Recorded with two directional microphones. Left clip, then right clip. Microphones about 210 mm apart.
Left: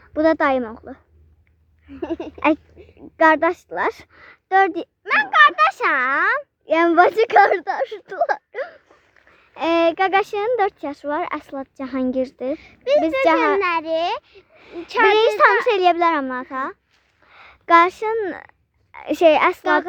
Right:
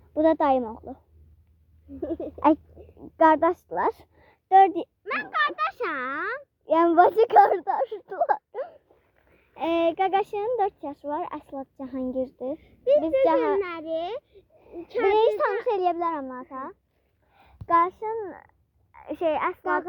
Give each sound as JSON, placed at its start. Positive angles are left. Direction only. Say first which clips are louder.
{"t": 0.1, "sound": "speech", "louder": "left 4 dB", "side_deg": 0}
{"t": 2.5, "sound": "speech", "louder": "left 2 dB", "side_deg": 0}
{"t": 5.0, "sound": "speech", "louder": "left 13 dB", "side_deg": 10}
{"t": 6.7, "sound": "a child's voice", "louder": "left 4 dB", "side_deg": 0}
{"t": 15.4, "sound": "a child's voice", "louder": "left 10 dB", "side_deg": 20}
{"t": 17.2, "sound": "a sound", "louder": "left 9 dB", "side_deg": 20}
{"t": 18.1, "sound": "speech", "louder": "left 9 dB", "side_deg": 40}